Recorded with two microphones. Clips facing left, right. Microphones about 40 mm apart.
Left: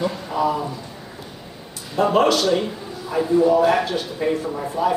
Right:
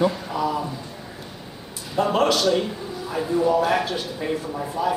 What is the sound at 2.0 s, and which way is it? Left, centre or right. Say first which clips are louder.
Speech: left 3 dB; centre.